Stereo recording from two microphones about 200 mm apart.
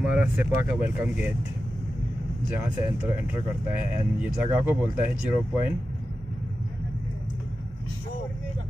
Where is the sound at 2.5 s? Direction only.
10° right (ahead or behind).